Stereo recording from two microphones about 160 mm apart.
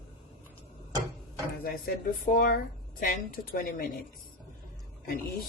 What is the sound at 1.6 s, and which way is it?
Speech, 65° left (ahead or behind).